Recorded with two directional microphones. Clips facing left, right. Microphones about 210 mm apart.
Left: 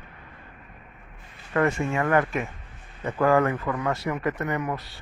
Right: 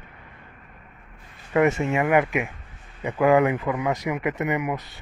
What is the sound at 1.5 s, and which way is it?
A man's voice, 20° right (ahead or behind).